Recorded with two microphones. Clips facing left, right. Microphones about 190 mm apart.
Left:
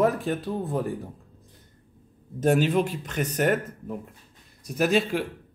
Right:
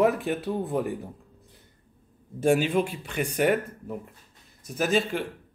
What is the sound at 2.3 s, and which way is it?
A man's voice, 10° right (ahead or behind).